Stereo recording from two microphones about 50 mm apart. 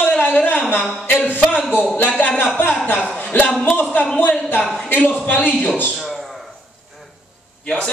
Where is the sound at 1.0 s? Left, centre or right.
Left.